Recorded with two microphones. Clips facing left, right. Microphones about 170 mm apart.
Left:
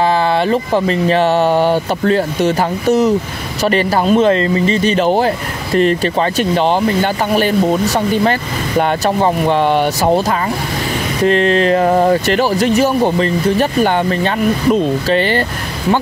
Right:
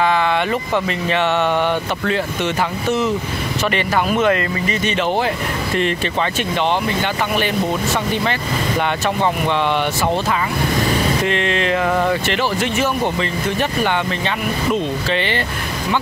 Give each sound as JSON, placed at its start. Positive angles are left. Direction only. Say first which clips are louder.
{"t": 0.0, "sound": "speech", "louder": "left 4 dB", "side_deg": 35}
{"t": 11.2, "sound": "speech", "louder": "left 7 dB", "side_deg": 40}